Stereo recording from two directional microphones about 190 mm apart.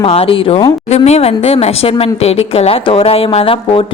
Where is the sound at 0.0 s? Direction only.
30° left (ahead or behind).